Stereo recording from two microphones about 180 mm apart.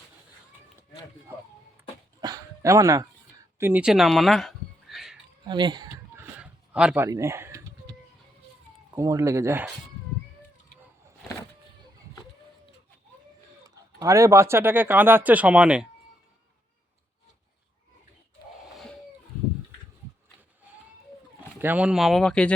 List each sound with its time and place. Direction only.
2.2 s dog: 20° right (ahead or behind)
3.6 s a sound: 10° right (ahead or behind)
5.5 s speech: 25° right (ahead or behind)
6.1 s a sound: 5° right (ahead or behind)
9.0 s speech: 15° right (ahead or behind)
13.7 s speech: 20° right (ahead or behind)
21.6 s speech: 10° right (ahead or behind)